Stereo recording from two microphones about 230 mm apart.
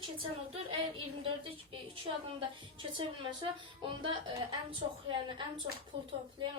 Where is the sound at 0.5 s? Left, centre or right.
Right.